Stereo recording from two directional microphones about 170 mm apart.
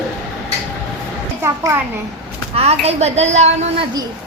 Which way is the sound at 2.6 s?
35° right (ahead or behind).